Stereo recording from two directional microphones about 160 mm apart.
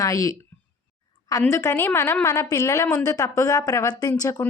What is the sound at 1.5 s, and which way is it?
A woman's voice, 20° left (ahead or behind).